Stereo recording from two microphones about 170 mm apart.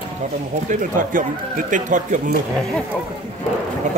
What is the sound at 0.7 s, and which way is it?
Speech, 50° right (ahead or behind).